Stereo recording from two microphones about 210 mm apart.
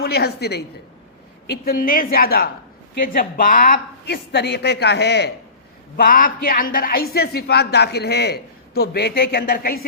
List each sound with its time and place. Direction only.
0.0 s a woman's voice: 50° left (ahead or behind)
6.0 s speech: 40° left (ahead or behind)